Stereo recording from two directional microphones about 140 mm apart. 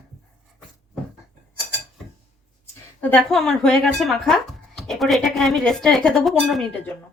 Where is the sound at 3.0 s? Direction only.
5° left (ahead or behind).